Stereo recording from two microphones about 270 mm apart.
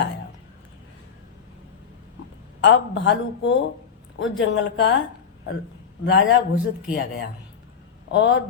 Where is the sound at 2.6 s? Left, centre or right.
Left.